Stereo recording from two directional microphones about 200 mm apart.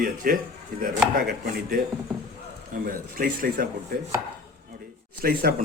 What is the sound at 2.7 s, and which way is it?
Speech, 45° right (ahead or behind).